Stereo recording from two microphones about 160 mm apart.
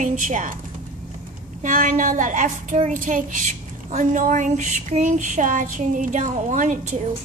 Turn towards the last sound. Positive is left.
turn(degrees=-55)  # may be behind; listen again after turning